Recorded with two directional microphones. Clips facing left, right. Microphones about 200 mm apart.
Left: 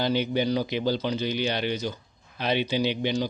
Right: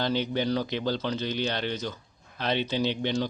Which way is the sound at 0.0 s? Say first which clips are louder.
Left 2 dB; 10° left (ahead or behind).